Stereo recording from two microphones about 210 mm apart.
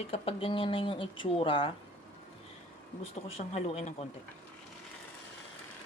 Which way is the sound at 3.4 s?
30° left (ahead or behind).